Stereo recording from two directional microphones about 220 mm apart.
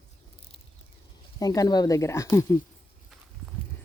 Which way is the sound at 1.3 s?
15° left (ahead or behind).